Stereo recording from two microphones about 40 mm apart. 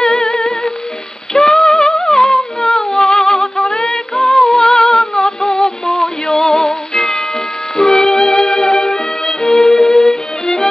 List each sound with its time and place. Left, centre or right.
0.0 s music: centre
2.0 s humming: centre
2.3 s music: centre